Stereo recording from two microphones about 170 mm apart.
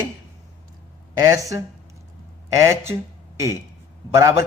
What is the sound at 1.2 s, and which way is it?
A man's voice, 20° right (ahead or behind).